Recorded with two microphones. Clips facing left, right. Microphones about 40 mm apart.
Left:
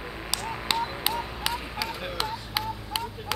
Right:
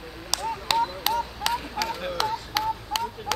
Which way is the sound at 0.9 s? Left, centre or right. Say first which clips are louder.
Right 3 dB; centre.